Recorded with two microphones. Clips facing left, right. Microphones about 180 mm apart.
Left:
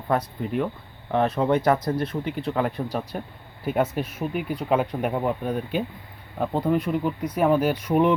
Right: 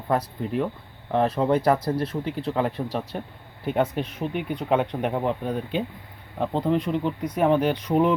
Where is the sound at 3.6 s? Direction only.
5° left (ahead or behind).